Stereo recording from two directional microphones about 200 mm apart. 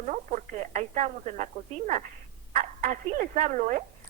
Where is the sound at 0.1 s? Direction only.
35° right (ahead or behind).